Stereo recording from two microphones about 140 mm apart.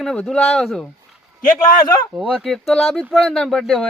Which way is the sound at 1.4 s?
70° left (ahead or behind).